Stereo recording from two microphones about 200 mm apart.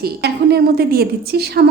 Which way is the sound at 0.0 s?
55° right (ahead or behind).